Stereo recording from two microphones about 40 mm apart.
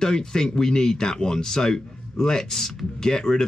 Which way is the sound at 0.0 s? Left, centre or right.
Centre.